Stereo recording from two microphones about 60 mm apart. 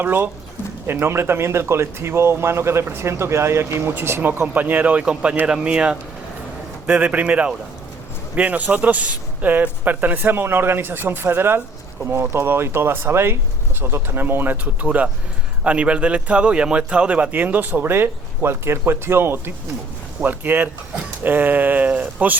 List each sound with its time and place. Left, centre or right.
0.0 s a man's voice: right